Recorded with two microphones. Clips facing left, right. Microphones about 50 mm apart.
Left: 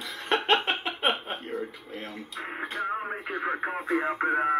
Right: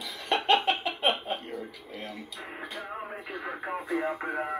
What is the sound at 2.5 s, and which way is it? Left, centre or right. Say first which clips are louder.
Speech: left 7 dB; left.